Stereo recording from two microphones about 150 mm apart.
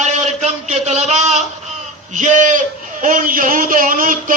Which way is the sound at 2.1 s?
55° right (ahead or behind).